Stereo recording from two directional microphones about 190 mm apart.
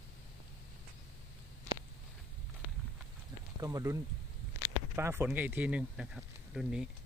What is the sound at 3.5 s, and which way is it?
Speech, 20° right (ahead or behind).